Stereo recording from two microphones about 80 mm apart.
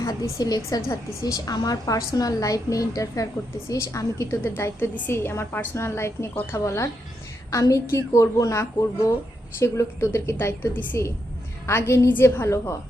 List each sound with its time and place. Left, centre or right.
0.0 s a woman's voice: left